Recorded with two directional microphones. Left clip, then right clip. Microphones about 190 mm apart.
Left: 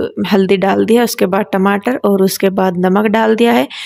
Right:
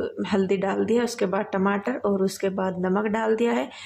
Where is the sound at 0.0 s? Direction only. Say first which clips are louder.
Left 11 dB; 45° left (ahead or behind).